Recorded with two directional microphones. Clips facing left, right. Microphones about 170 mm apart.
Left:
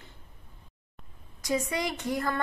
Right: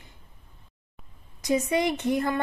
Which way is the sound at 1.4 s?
20° right (ahead or behind).